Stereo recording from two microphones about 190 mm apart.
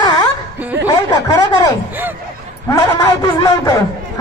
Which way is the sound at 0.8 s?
20° left (ahead or behind).